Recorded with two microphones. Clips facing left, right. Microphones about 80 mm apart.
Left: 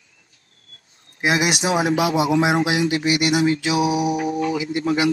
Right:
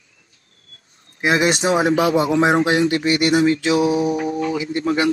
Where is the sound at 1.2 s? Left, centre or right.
Centre.